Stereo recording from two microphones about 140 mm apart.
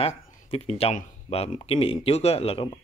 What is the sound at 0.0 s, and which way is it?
Speech, 45° left (ahead or behind).